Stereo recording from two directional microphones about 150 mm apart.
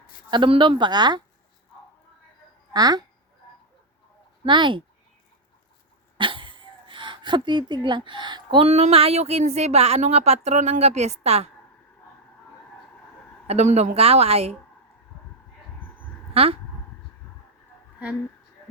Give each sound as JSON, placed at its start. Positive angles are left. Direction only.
{"t": 0.3, "sound": "speech", "side_deg": -35}
{"t": 2.7, "sound": "speech", "side_deg": -25}
{"t": 4.4, "sound": "speech", "side_deg": -30}
{"t": 6.1, "sound": "speech", "side_deg": -35}
{"t": 13.5, "sound": "speech", "side_deg": -50}
{"t": 16.3, "sound": "a sound", "side_deg": -40}